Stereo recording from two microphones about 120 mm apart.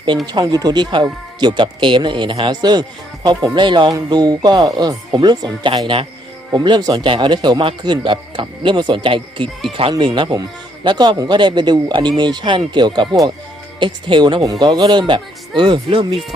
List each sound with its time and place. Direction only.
0.3 s a man's voice: 35° right (ahead or behind)